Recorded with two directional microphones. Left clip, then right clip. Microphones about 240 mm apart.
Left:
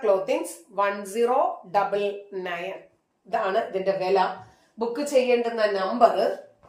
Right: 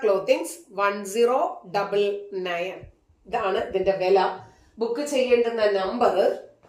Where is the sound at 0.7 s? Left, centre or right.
Centre.